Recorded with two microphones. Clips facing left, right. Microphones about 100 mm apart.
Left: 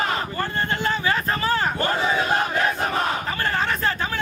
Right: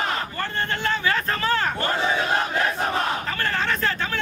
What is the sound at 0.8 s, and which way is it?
Vehicle, 10° left (ahead or behind).